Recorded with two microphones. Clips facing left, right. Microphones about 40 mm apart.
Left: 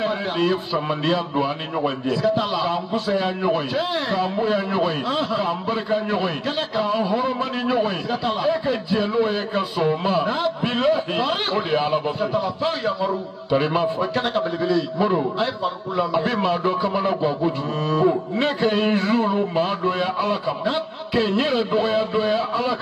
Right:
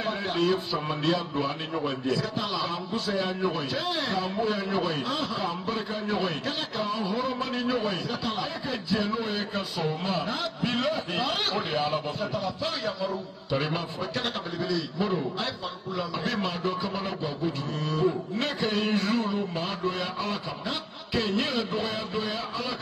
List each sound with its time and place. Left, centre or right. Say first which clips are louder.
0.8 s a man's voice: left 5 dB; left
2.2 s a man's voice: left 9 dB; left
8.3 s a man's voice: left 13 dB; centre; by 12.7 s left
12.8 s a man's voice: left 7 dB; centre
13.7 s a man's voice: left 10 dB; left
17.0 s a man's voice: left 9 dB; left
21.5 s a man's voice: left 9 dB; left
22.1 s a man's voice: left 10 dB; centre